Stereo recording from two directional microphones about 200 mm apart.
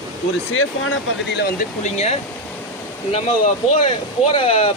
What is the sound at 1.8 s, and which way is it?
Speech, 35° left (ahead or behind).